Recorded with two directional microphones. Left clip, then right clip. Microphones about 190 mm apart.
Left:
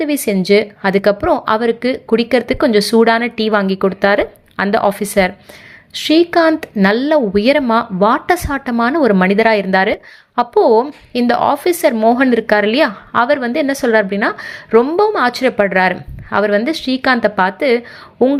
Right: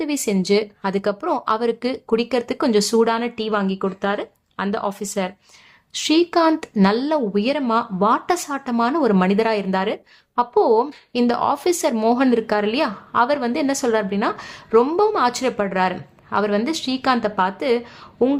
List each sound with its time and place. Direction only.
0.0 s a woman's voice: 15° left (ahead or behind)